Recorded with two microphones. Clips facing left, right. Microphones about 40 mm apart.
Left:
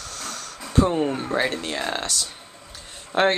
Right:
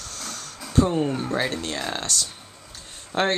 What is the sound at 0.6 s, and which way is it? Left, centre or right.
Speech, centre.